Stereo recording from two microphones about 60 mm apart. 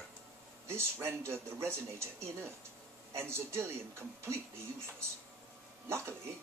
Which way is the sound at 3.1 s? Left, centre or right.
Right.